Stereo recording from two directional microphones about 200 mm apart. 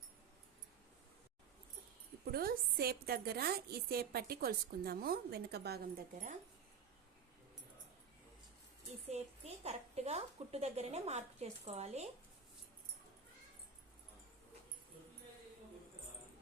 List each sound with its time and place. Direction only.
2.3 s a woman's voice: 50° right (ahead or behind)
9.0 s a woman's voice: 30° right (ahead or behind)